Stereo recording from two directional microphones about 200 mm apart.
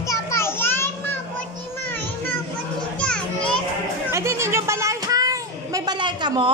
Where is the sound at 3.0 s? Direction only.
5° left (ahead or behind).